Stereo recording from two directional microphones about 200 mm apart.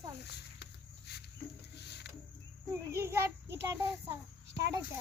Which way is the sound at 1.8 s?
55° left (ahead or behind).